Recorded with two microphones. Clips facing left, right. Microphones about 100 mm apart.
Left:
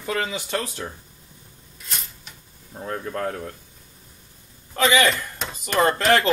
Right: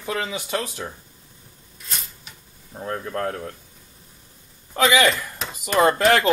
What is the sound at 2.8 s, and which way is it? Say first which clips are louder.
Speech: right 1 dB; centre (ahead or behind).